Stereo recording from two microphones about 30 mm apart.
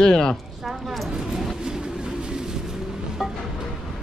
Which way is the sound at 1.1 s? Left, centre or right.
Centre.